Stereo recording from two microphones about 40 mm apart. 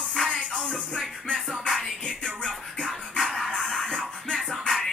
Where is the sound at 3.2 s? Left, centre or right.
Centre.